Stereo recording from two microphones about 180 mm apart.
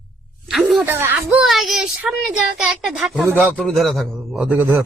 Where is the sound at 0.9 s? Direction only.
10° right (ahead or behind).